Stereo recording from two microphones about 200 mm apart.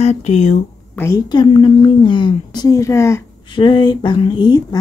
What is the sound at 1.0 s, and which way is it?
A woman's voice, 20° left (ahead or behind).